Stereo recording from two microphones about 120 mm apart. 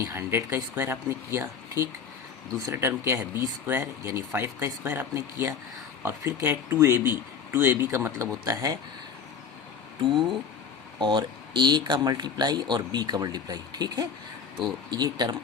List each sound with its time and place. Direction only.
0.0 s speech: 20° right (ahead or behind)
10.0 s speech: 40° right (ahead or behind)